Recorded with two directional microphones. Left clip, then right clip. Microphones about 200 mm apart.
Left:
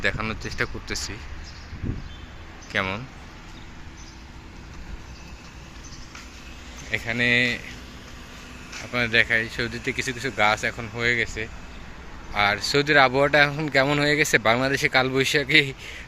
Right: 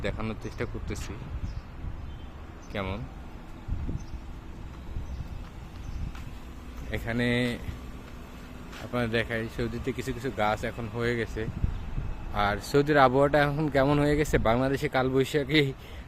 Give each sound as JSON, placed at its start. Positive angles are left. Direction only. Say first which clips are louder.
{"t": 0.0, "sound": "speech", "louder": "left 8 dB", "side_deg": -5}
{"t": 2.7, "sound": "speech", "louder": "left 9 dB", "side_deg": 0}
{"t": 6.9, "sound": "speech", "louder": "left 8 dB", "side_deg": -15}
{"t": 8.9, "sound": "speech", "louder": "left 9 dB", "side_deg": -15}
{"t": 10.9, "sound": "speech", "louder": "left 6 dB", "side_deg": -25}